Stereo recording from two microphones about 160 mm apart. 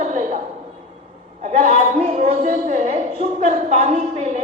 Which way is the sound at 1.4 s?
50° right (ahead or behind).